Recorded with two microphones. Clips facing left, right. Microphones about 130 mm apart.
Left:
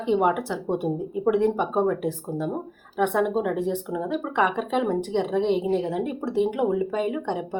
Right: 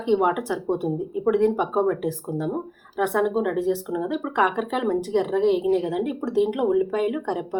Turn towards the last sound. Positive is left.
turn(degrees=-5)  # may be behind; listen again after turning